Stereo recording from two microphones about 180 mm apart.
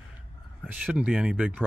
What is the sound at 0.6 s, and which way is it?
Speech, 5° right (ahead or behind).